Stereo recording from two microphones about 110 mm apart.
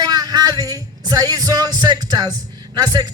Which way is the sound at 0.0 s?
40° right (ahead or behind).